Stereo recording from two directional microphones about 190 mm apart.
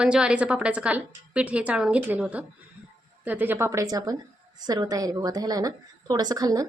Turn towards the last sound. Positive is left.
turn(degrees=-20)  # may be behind; listen again after turning